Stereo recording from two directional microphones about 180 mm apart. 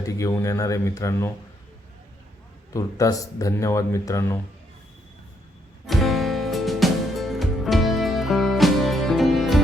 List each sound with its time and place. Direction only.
0.0 s speech: 20° left (ahead or behind)
2.7 s speech: 20° left (ahead or behind)
5.8 s music: centre (ahead or behind)